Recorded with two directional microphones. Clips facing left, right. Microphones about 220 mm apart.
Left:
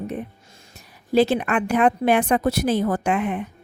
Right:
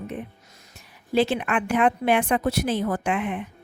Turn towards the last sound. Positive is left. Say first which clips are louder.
# left 3 dB
turn(degrees=40)  # may be behind; listen again after turning